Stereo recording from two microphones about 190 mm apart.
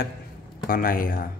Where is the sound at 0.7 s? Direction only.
50° left (ahead or behind).